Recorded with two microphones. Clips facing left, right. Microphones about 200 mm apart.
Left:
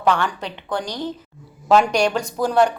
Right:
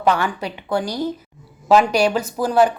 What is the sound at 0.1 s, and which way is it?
A woman's voice, 10° right (ahead or behind).